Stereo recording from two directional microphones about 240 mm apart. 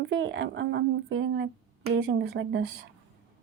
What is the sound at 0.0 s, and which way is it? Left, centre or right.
Speech, right.